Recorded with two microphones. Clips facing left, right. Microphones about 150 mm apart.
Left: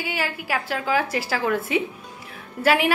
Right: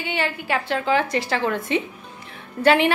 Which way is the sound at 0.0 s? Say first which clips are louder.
Right 2 dB; 5° left (ahead or behind).